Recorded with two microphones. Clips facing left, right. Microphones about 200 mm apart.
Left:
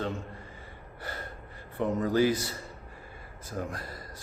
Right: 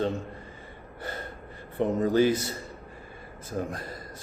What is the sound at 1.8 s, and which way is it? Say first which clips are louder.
Speech: right 3 dB; 25° right (ahead or behind).